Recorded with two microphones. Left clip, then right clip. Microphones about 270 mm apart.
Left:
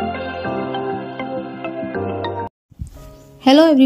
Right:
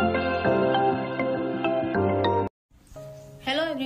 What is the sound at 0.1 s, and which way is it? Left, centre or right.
Music, centre.